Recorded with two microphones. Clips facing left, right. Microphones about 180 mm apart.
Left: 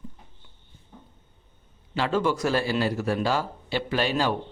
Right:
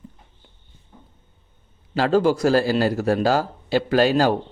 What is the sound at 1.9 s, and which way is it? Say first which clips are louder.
Speech: right 6 dB; 35° right (ahead or behind).